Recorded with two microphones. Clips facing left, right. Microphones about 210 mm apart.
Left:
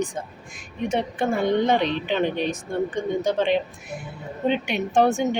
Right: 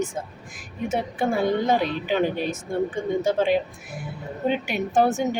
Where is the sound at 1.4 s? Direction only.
20° left (ahead or behind).